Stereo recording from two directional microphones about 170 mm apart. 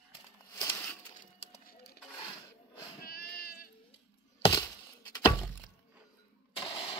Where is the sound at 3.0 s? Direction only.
65° left (ahead or behind).